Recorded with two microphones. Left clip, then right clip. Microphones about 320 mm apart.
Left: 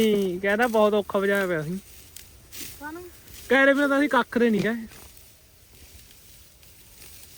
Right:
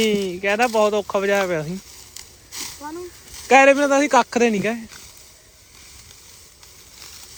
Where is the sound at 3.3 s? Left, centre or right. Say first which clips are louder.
Right 7 dB; centre.